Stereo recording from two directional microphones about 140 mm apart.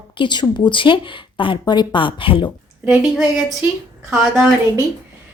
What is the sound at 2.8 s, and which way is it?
A woman's voice, 5° right (ahead or behind).